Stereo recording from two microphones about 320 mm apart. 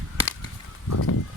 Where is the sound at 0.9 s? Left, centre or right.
Left.